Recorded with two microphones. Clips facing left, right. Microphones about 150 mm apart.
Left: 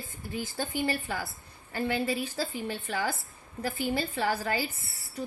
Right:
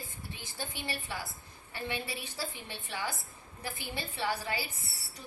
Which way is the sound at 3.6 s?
70° left (ahead or behind).